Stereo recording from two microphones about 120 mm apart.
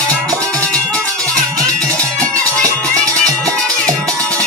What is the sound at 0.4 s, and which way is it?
Music, 10° left (ahead or behind).